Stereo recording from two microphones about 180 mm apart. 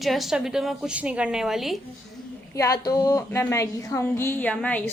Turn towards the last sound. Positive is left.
turn(degrees=10)  # may be behind; listen again after turning